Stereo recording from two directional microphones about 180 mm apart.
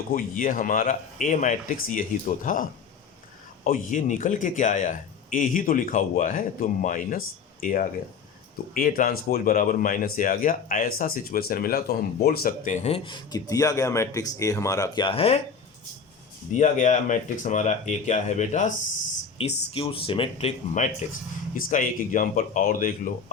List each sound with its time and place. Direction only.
0.1 s speech: 50° left (ahead or behind); by 15.4 s 30° left (ahead or behind)
16.6 s speech: 45° left (ahead or behind)
19.7 s speech: 30° left (ahead or behind); by 23.1 s 50° left (ahead or behind)